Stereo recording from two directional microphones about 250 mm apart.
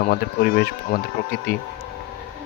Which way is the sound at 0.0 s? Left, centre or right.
Left.